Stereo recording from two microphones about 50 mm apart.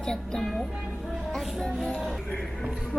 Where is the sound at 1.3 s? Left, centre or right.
Centre.